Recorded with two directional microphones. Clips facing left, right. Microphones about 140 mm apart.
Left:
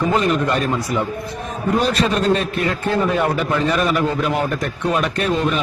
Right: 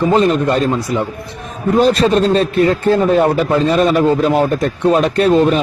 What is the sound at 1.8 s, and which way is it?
A man's voice, 35° right (ahead or behind).